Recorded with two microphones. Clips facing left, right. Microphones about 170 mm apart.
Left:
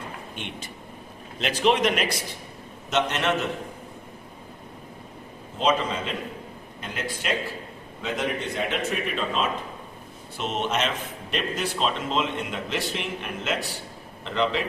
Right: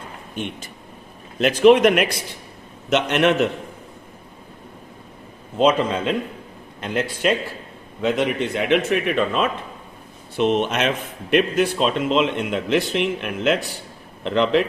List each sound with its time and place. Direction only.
0.3 s a man's voice: 45° right (ahead or behind)
2.9 s a man's voice: 65° right (ahead or behind)
5.5 s a man's voice: 60° right (ahead or behind)
8.0 s a man's voice: 70° right (ahead or behind)